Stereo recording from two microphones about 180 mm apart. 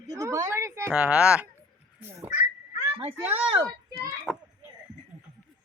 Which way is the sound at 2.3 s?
35° left (ahead or behind).